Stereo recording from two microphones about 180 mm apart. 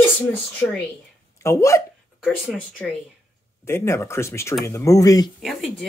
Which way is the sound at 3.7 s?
15° left (ahead or behind).